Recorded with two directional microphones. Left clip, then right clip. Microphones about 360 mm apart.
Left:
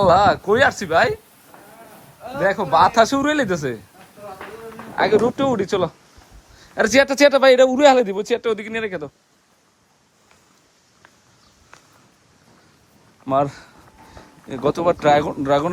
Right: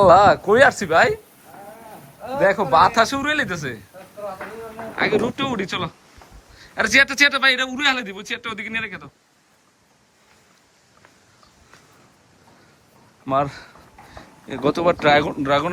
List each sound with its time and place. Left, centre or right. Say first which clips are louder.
0.0 s speech: right 2 dB; centre
2.4 s a man's voice: even; centre
4.9 s a man's voice: left 4 dB; centre
13.2 s a man's voice: left 2 dB; centre